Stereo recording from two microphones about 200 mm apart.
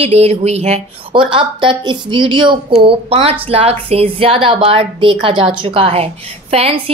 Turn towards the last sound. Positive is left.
turn(degrees=-30)  # may be behind; listen again after turning